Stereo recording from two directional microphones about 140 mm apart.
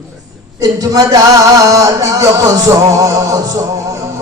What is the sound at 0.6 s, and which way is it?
Music, 25° right (ahead or behind).